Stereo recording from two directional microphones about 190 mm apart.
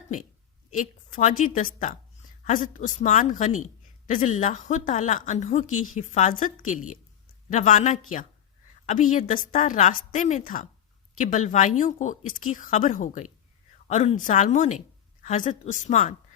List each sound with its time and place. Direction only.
0.7 s a woman's voice: 40° left (ahead or behind)